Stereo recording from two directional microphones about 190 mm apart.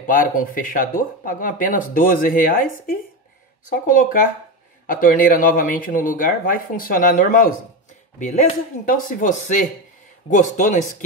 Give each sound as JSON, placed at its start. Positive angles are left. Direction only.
{"t": 0.0, "sound": "speech", "side_deg": 45}